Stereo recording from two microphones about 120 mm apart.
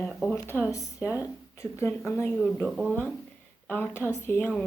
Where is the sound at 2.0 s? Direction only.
20° left (ahead or behind).